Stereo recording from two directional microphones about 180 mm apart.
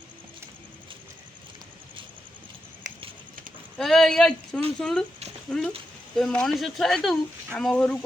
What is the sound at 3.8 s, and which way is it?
Speech, centre (ahead or behind).